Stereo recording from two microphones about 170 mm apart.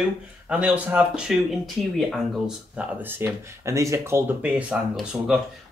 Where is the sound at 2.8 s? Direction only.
10° right (ahead or behind).